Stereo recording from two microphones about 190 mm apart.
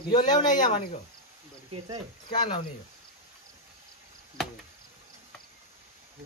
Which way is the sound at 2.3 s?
25° left (ahead or behind).